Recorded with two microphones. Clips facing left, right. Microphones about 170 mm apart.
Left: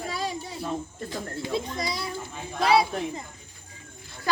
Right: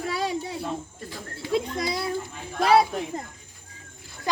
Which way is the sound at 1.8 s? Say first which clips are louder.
Right 3 dB; 55° right (ahead or behind).